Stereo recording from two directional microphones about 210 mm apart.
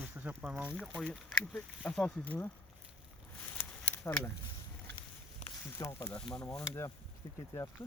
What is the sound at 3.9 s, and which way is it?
Speech, 10° left (ahead or behind).